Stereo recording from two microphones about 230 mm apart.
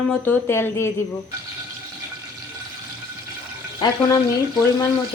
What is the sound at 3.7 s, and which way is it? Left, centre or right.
Speech, centre.